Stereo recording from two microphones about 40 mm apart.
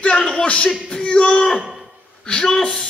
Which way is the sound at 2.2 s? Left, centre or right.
Left.